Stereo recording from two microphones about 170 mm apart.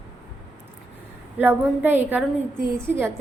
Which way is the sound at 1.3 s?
10° right (ahead or behind).